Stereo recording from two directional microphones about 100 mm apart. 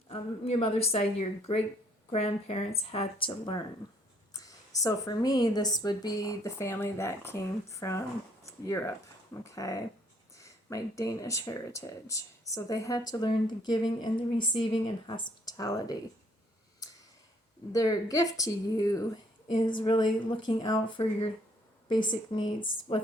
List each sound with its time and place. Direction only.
0.1 s a woman's voice: 90° left
2.0 s speech: 90° left; by 3.6 s 55° left (ahead or behind)
4.4 s speech: 35° left (ahead or behind)
17.7 s speech: 35° left (ahead or behind); by 23.0 s 55° left (ahead or behind)